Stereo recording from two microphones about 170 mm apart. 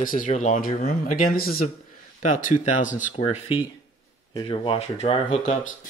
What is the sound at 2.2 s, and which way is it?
Speech, 50° left (ahead or behind).